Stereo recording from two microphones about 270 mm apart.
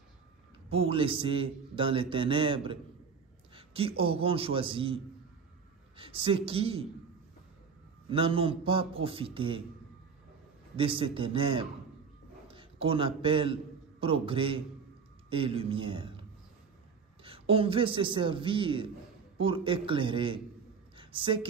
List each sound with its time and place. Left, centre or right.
0.7 s a man's voice: right
8.1 s a man's voice: centre
10.8 s a man's voice: centre
20.9 s a sound: centre